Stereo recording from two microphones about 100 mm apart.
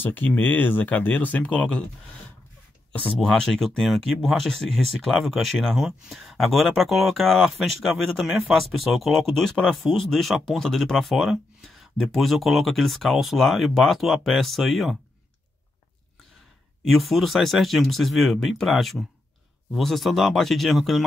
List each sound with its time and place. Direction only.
0.0 s speech: 20° left (ahead or behind)
3.1 s speech: 5° left (ahead or behind)
16.8 s speech: centre (ahead or behind)